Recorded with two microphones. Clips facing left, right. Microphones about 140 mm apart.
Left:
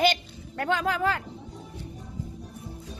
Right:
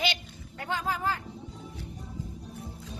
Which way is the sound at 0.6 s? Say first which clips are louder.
Left 6 dB; 70° left (ahead or behind).